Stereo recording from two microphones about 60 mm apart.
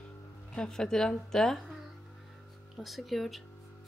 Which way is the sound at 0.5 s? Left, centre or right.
Centre.